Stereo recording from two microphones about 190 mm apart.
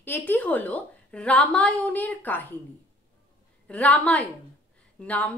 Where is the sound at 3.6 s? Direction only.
5° left (ahead or behind).